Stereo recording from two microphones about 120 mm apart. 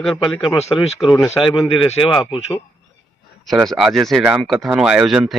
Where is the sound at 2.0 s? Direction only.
Centre (ahead or behind).